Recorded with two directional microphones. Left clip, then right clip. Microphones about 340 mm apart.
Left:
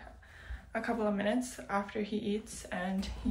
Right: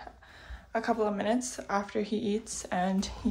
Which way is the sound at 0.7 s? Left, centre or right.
Centre.